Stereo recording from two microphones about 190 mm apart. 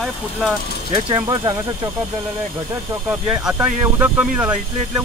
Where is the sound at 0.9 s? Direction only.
20° right (ahead or behind).